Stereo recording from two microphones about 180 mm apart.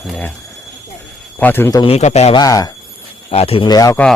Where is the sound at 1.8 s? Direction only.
35° left (ahead or behind).